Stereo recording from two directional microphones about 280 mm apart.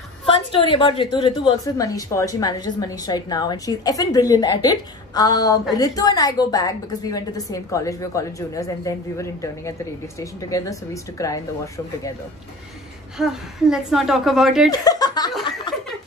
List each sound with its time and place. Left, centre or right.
0.3 s a woman's voice: centre
13.2 s a woman's voice: centre
14.7 s a woman's voice: centre